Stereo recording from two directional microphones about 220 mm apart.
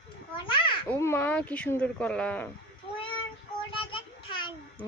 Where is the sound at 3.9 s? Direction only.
25° left (ahead or behind).